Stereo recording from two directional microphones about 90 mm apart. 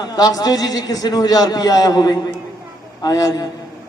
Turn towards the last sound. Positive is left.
turn(degrees=45)  # may be behind; listen again after turning